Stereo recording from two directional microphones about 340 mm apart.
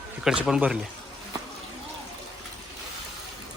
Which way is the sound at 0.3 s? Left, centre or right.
Centre.